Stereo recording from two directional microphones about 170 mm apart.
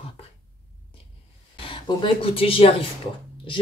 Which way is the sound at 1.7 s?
30° left (ahead or behind).